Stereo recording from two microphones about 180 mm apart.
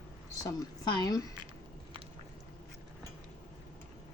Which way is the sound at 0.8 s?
20° left (ahead or behind).